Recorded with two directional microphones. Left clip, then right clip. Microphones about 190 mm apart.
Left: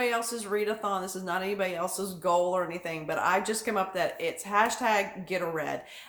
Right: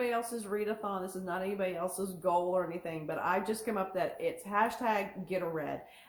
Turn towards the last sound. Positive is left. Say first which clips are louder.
# left 4 dB
turn(degrees=20)  # may be behind; listen again after turning